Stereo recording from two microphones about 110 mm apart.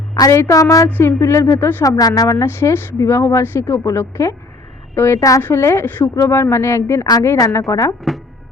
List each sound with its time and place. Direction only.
0.1 s a woman's voice: 30° left (ahead or behind)